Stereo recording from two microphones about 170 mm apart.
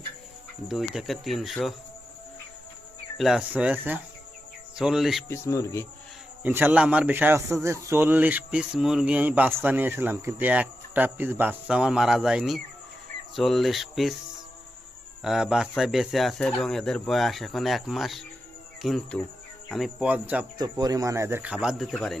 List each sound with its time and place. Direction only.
0.7 s speech: centre (ahead or behind)
3.2 s a man's voice: 5° right (ahead or behind)
5.3 s speech: 20° left (ahead or behind)
6.4 s a man's voice: 10° right (ahead or behind)
15.2 s a man's voice: 5° right (ahead or behind)
20.6 s a man's voice: 20° right (ahead or behind); by 22.2 s centre (ahead or behind)